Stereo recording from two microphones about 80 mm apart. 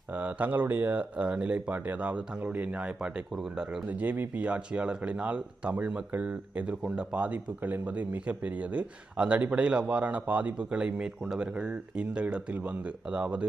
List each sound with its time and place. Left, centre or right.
0.1 s speech: centre
3.8 s speech: centre